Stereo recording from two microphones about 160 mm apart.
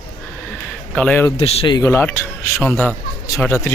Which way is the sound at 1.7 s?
20° left (ahead or behind).